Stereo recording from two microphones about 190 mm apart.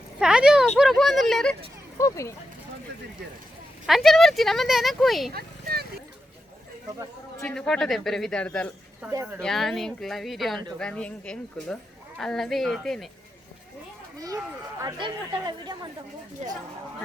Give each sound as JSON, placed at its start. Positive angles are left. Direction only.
{"t": 0.2, "sound": "speech", "side_deg": -5}
{"t": 2.0, "sound": "speech", "side_deg": 15}
{"t": 3.8, "sound": "speech", "side_deg": 0}
{"t": 5.3, "sound": "a sound", "side_deg": -55}
{"t": 7.4, "sound": "speech", "side_deg": 5}
{"t": 9.0, "sound": "speech", "side_deg": -10}
{"t": 9.4, "sound": "speech", "side_deg": 0}
{"t": 14.8, "sound": "speech", "side_deg": -20}